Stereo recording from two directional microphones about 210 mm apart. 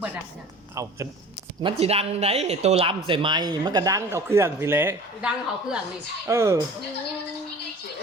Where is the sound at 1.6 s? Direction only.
30° right (ahead or behind).